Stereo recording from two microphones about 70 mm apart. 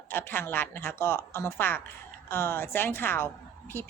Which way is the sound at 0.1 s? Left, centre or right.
Left.